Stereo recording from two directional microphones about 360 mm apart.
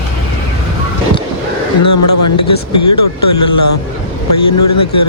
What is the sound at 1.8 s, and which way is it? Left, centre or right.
Speech, left.